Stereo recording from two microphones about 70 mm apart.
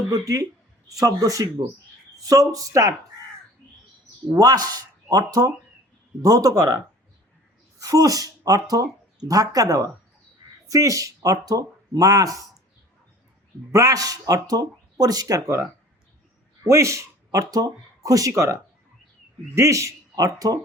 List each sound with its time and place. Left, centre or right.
0.1 s a man's voice: right
4.4 s speech: right
7.8 s speech: right
13.7 s speech: right
16.6 s speech: right
19.5 s a man's voice: right